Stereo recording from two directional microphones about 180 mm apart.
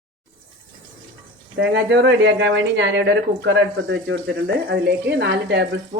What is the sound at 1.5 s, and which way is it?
Speech, 85° right.